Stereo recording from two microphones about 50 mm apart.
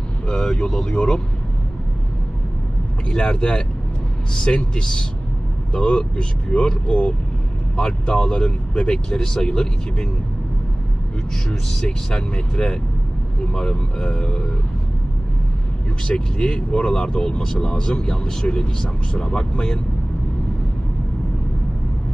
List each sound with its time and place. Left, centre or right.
0.3 s speech: centre
3.1 s speech: centre
11.8 s speech: centre
16.1 s speech: left